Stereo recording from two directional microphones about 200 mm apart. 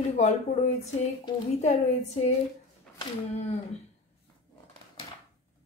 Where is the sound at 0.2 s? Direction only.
35° left (ahead or behind).